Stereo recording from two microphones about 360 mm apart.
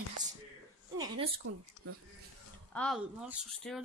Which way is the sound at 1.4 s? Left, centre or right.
Right.